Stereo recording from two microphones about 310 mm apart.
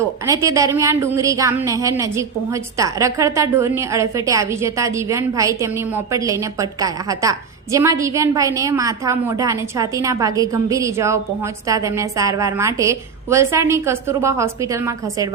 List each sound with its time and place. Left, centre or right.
0.3 s a woman's voice: centre